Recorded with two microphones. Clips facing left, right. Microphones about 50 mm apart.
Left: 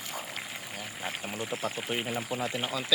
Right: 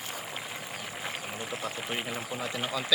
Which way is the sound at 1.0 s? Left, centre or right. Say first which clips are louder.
Left 3 dB; centre.